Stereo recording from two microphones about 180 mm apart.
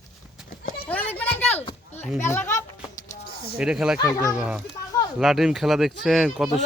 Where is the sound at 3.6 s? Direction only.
5° right (ahead or behind).